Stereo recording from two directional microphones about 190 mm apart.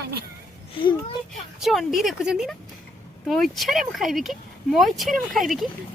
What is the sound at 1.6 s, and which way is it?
Speech, centre (ahead or behind).